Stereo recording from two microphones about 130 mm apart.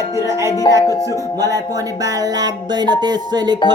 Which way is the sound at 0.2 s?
20° right (ahead or behind).